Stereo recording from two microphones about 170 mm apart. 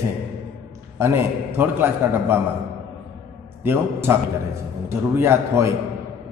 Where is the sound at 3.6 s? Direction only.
15° right (ahead or behind).